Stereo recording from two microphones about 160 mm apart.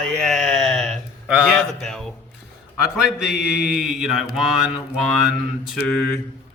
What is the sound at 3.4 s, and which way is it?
Mantra, 90° left.